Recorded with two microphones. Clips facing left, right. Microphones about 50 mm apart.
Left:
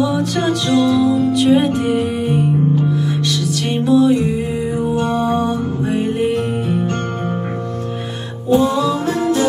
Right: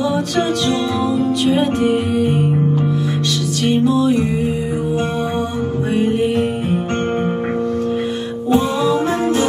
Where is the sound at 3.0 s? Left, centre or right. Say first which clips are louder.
Even; right.